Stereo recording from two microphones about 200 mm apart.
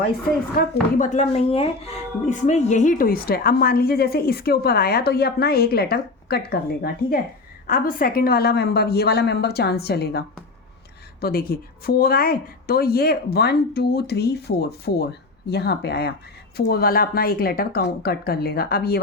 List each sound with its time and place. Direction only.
0.5 s a woman's voice: 40° left (ahead or behind)